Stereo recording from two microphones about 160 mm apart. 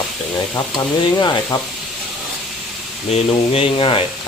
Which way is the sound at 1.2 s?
25° left (ahead or behind).